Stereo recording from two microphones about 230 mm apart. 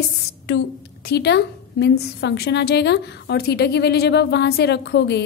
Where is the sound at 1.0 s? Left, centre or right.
Left.